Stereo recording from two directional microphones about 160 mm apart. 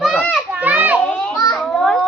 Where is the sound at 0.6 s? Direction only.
10° right (ahead or behind).